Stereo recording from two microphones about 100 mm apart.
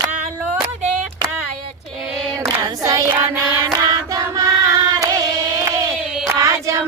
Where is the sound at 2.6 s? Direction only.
35° right (ahead or behind).